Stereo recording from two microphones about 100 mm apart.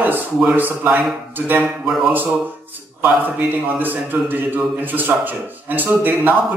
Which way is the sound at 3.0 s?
15° right (ahead or behind).